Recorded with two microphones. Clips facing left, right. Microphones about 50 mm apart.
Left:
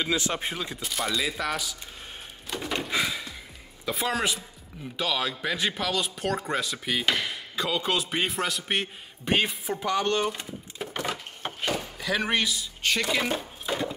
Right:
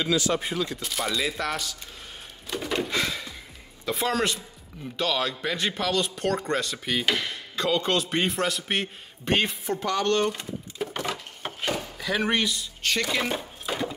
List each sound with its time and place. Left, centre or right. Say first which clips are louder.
0.0 s speech: right 3 dB; left
0.7 s speech: right 1 dB; centre
2.4 s a sound: right 3 dB; centre
3.8 s a man's voice: right 2 dB; centre